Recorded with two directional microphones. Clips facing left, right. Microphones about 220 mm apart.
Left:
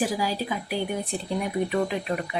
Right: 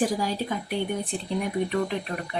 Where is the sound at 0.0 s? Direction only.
5° left (ahead or behind).